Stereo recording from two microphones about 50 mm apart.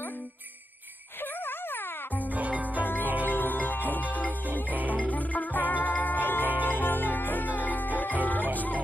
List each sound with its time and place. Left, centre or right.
1.4 s music: left
2.3 s music: right
3.3 s music: left
4.6 s music: right
4.9 s music: left